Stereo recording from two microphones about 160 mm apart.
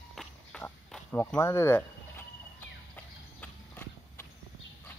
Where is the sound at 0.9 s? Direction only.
15° left (ahead or behind).